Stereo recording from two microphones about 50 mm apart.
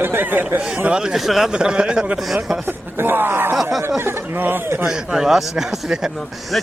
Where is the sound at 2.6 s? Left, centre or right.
Right.